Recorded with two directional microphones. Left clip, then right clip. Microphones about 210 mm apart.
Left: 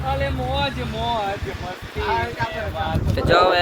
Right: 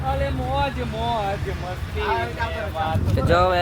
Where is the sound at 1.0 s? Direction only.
50° right (ahead or behind).